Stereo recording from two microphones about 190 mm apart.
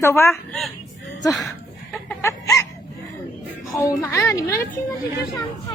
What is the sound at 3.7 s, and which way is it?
Speech, 15° left (ahead or behind).